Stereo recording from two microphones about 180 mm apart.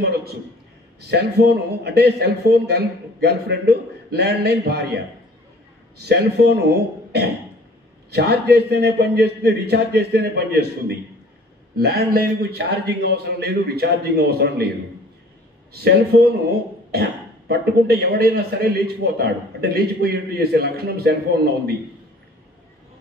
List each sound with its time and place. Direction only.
0.0 s a sound: 60° right (ahead or behind)
1.0 s a man's voice: 65° right (ahead or behind)
6.0 s a man's voice: 65° right (ahead or behind)
8.1 s a man's voice: 65° right (ahead or behind)
16.9 s a man's voice: 60° right (ahead or behind)